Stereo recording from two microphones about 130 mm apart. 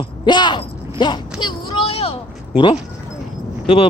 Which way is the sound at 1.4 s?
35° left (ahead or behind).